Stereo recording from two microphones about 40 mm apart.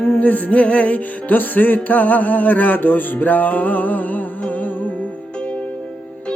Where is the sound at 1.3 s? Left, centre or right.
Left.